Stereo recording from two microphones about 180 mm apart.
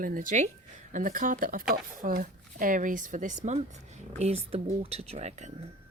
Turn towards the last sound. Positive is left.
turn(degrees=-40)  # may be behind; listen again after turning